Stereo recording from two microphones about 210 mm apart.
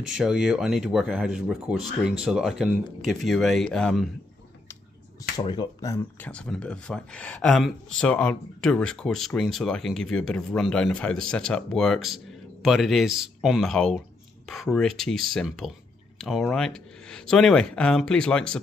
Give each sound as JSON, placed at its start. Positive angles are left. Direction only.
{"t": 0.2, "sound": "speech", "side_deg": -5}
{"t": 5.4, "sound": "speech", "side_deg": 20}
{"t": 6.2, "sound": "speech", "side_deg": 5}